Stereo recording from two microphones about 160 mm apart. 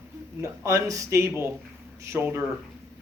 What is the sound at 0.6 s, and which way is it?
Speech, 20° right (ahead or behind).